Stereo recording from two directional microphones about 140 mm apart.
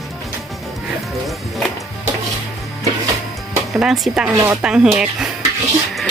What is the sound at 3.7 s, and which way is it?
Speech, centre (ahead or behind).